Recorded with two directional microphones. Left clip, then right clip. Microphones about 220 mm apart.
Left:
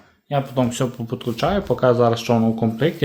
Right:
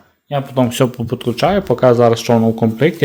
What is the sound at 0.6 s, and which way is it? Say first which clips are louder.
Speech: right 8 dB; 35° right (ahead or behind).